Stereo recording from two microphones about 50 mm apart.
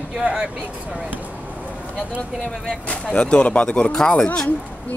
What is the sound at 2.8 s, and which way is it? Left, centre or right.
Speech, left.